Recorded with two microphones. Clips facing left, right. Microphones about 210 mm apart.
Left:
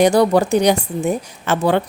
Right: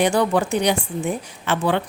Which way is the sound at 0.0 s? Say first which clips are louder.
Left 5 dB; 40° left (ahead or behind).